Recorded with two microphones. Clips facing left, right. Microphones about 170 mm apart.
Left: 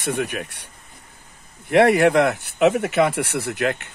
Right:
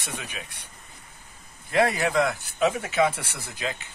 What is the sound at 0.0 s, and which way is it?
Speech, 60° left (ahead or behind).